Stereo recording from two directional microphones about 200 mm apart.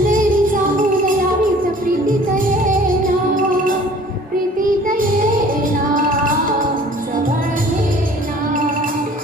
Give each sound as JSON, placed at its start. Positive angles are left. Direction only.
{"t": 0.1, "sound": "music", "side_deg": -40}
{"t": 4.9, "sound": "music", "side_deg": -40}